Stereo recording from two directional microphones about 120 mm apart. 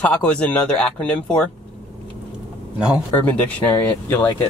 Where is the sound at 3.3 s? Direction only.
10° left (ahead or behind).